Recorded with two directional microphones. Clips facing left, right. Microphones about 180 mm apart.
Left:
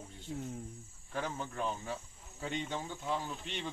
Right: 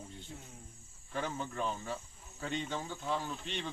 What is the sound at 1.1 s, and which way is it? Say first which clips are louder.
Speech: right 1 dB; 10° left (ahead or behind).